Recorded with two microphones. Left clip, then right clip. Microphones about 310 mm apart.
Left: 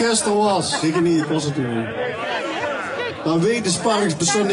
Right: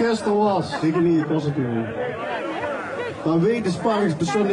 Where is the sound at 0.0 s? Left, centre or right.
Centre.